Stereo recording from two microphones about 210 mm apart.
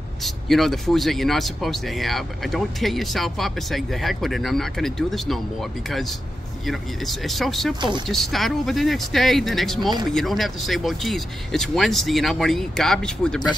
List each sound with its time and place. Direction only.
0.2 s speech: centre (ahead or behind)
9.8 s speech: 20° right (ahead or behind)
10.1 s speech: centre (ahead or behind)